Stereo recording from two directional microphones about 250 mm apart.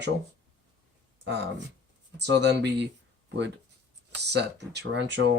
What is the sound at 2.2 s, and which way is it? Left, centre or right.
Speech, right.